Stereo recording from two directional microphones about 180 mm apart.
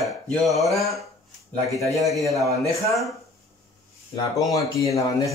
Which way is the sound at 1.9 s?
Centre (ahead or behind).